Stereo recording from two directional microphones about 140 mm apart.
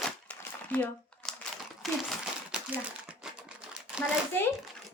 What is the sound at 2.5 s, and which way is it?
Crumpling, 5° right (ahead or behind).